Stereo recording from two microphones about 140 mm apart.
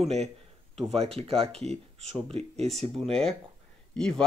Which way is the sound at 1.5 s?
5° left (ahead or behind).